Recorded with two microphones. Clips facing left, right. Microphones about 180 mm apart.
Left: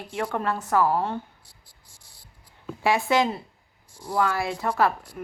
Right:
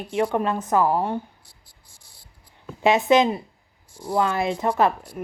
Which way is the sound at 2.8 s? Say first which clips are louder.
Right 5 dB; 20° right (ahead or behind).